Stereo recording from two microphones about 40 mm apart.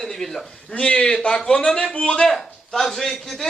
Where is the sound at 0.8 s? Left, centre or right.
Left.